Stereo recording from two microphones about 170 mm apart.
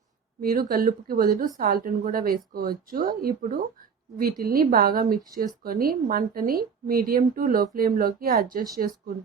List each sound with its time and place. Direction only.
0.4 s speech: 60° right (ahead or behind)